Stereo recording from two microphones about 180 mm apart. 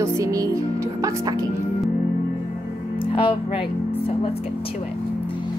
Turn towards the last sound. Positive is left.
turn(degrees=30)  # may be behind; listen again after turning